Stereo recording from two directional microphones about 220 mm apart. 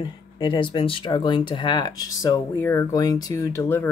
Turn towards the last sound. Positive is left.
turn(degrees=10)  # may be behind; listen again after turning